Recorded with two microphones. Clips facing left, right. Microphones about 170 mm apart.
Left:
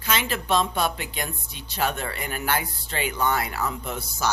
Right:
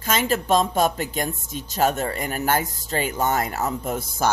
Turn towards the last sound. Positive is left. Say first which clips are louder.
# right 5 dB
turn(degrees=-45)  # may be behind; listen again after turning